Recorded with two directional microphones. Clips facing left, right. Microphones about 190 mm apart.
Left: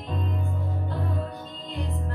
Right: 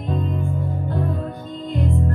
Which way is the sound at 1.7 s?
50° right (ahead or behind).